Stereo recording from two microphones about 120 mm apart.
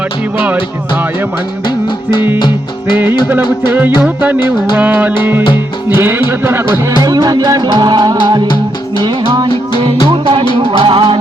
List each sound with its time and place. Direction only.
3.2 s music: 15° right (ahead or behind)
7.0 s music: 30° right (ahead or behind); by 11.2 s 45° right (ahead or behind)